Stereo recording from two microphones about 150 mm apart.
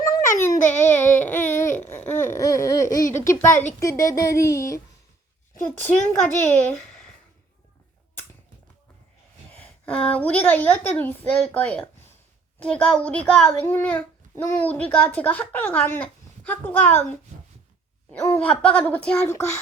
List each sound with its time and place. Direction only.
0.4 s a sound: 15° left (ahead or behind)
1.8 s a child's voice: 15° left (ahead or behind)
9.6 s a child's voice: 10° left (ahead or behind)
18.1 s a child's voice: 10° left (ahead or behind)